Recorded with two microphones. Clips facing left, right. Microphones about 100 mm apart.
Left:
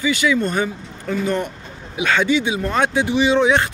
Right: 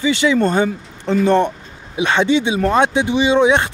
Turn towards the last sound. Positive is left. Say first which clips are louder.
# right 2 dB
turn(degrees=-20)  # may be behind; listen again after turning